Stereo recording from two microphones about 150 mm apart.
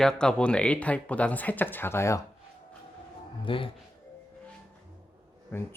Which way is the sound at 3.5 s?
35° left (ahead or behind).